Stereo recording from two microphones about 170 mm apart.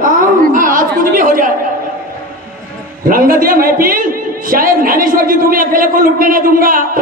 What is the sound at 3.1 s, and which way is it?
A man's voice, 55° right (ahead or behind).